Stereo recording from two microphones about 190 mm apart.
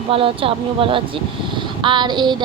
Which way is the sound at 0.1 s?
30° right (ahead or behind).